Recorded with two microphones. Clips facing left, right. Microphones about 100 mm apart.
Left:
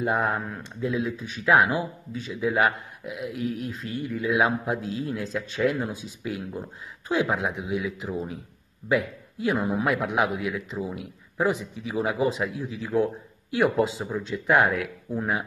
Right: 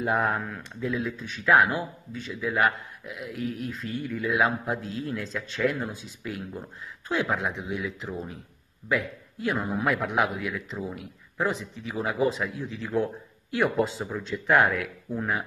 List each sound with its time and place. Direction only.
0.0 s a man's voice: centre (ahead or behind)
2.5 s a man's voice: 15° left (ahead or behind)
3.6 s a man's voice: 5° left (ahead or behind)